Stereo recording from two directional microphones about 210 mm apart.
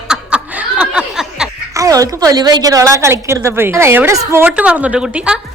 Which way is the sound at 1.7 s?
15° right (ahead or behind).